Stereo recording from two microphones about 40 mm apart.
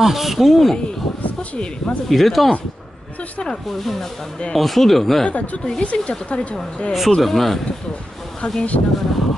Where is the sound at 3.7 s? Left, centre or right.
Centre.